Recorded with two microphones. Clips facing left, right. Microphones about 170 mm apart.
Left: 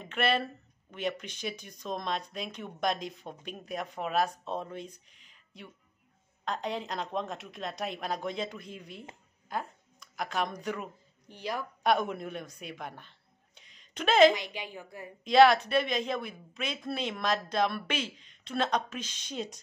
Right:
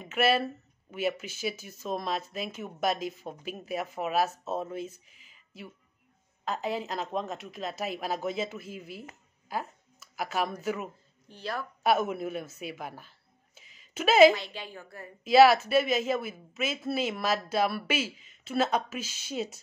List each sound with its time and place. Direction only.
0.0 s speech: 5° right (ahead or behind)
11.2 s a woman's voice: 15° left (ahead or behind)
11.8 s speech: 5° right (ahead or behind)
13.6 s a sound: 5° right (ahead or behind)
14.3 s a woman's voice: 15° left (ahead or behind)
15.2 s speech: 5° right (ahead or behind)